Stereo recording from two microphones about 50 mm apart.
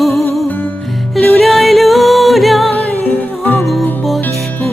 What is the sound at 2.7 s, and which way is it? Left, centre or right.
Music, left.